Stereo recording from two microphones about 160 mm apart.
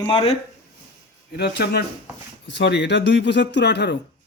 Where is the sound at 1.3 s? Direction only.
85° left.